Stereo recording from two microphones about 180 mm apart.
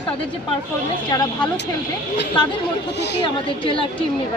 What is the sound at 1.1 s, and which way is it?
Speech, 25° left (ahead or behind).